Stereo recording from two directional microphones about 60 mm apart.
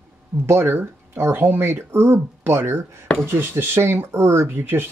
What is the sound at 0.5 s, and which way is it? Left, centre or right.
Speech, right.